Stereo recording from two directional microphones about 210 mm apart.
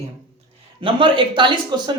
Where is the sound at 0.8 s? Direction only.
25° right (ahead or behind).